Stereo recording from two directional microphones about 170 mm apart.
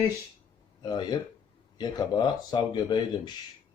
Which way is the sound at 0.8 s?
25° left (ahead or behind).